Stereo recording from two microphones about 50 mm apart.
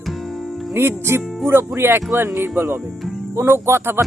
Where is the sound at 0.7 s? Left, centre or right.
Right.